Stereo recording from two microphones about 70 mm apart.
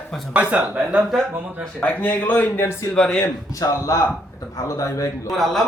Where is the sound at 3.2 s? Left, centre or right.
Left.